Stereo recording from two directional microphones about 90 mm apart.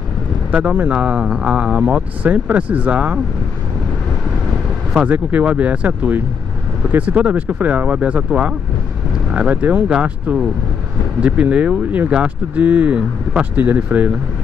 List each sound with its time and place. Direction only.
0.5 s speech: 15° right (ahead or behind)
4.9 s speech: 15° right (ahead or behind)